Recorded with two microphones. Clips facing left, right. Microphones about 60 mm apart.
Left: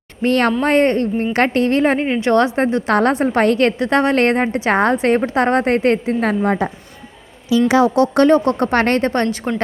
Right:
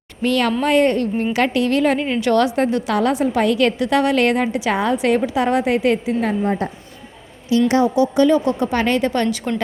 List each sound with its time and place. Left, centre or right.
0.2 s a woman's voice: left
2.9 s a woman's voice: left
6.2 s a woman's voice: left
7.8 s a woman's voice: left